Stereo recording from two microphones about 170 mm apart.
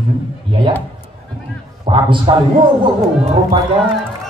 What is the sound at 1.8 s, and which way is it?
Speech, 30° right (ahead or behind).